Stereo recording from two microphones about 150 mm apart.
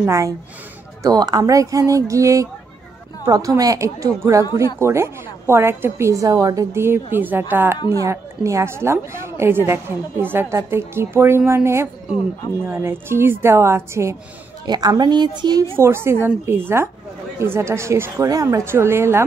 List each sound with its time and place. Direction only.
0.0 s a woman's voice: 20° right (ahead or behind)
15.8 s a woman's voice: 15° right (ahead or behind)